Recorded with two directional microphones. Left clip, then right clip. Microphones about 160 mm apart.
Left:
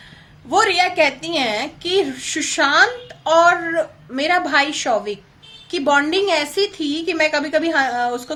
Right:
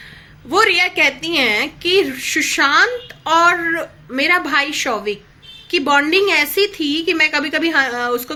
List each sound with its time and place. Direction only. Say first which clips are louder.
0.5 s a woman's voice: right 1 dB; 20° left (ahead or behind)